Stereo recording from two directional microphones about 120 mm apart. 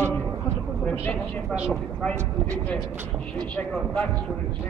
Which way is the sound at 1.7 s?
10° left (ahead or behind).